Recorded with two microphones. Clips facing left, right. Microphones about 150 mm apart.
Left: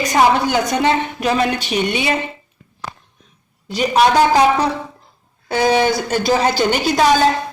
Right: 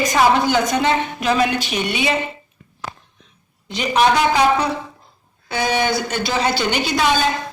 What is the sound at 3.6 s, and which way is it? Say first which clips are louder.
A woman's voice: left 2 dB; 40° left (ahead or behind).